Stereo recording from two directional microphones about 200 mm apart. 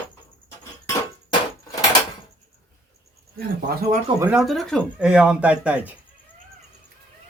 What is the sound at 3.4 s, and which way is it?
Speech, 50° right (ahead or behind).